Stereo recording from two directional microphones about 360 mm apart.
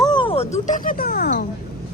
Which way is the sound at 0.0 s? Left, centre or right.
Centre.